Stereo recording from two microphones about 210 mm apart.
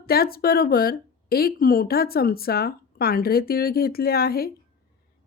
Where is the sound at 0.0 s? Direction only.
45° left (ahead or behind).